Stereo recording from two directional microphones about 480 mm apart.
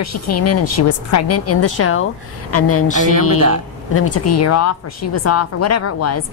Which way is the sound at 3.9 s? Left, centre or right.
Left.